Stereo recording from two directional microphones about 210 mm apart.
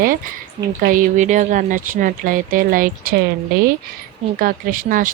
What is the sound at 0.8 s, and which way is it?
Speech, 40° right (ahead or behind).